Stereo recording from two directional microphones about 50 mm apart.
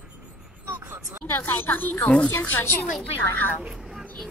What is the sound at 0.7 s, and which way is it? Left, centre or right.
Vehicle, right.